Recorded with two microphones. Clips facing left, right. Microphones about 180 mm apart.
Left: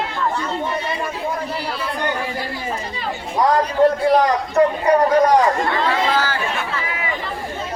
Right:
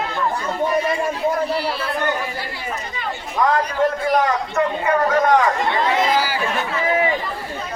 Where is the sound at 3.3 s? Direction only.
35° left (ahead or behind).